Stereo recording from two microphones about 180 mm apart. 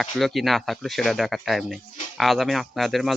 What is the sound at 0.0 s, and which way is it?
Speech, centre (ahead or behind).